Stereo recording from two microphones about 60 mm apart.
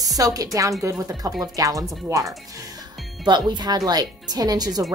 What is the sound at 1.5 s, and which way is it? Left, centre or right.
Speech, right.